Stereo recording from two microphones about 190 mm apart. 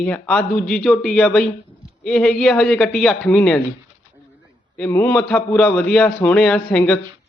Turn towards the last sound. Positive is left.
turn(degrees=5)  # may be behind; listen again after turning